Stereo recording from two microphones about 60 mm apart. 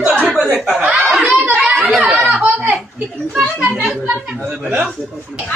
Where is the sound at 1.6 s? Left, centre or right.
Centre.